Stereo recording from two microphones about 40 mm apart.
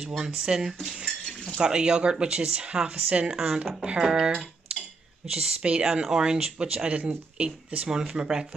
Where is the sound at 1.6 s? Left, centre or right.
Right.